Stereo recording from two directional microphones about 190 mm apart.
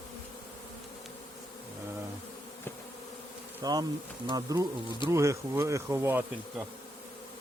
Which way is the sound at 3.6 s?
20° right (ahead or behind).